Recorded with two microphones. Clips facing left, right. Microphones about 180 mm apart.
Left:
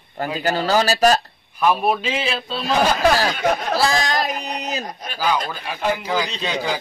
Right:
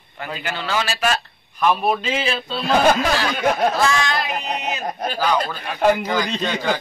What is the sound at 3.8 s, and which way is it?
Speech, 35° left (ahead or behind).